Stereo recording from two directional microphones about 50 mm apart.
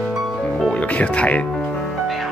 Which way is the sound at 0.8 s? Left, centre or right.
Left.